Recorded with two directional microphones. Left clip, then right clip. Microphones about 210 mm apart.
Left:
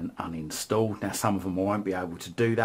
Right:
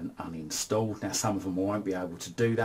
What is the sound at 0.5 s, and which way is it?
Speech, 30° left (ahead or behind).